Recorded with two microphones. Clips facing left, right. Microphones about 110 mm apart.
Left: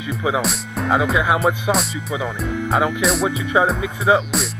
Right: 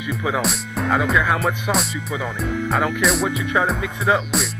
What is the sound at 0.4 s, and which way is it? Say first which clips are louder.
Speech: even; centre (ahead or behind).